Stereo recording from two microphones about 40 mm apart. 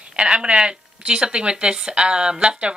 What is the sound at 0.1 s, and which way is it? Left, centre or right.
A woman's voice, right.